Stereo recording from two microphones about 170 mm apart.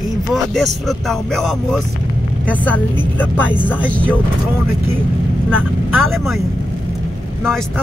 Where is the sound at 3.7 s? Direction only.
10° left (ahead or behind).